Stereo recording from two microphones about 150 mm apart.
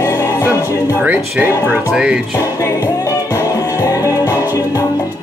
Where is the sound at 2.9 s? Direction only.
20° left (ahead or behind).